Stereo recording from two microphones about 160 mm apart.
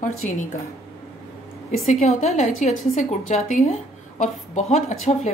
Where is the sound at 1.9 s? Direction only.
45° left (ahead or behind).